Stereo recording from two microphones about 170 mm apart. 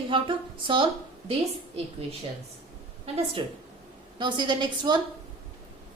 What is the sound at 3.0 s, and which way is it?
A woman's voice, 35° right (ahead or behind).